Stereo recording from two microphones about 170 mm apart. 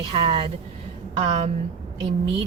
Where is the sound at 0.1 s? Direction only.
30° right (ahead or behind).